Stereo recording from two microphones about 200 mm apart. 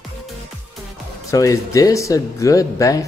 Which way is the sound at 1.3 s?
15° left (ahead or behind).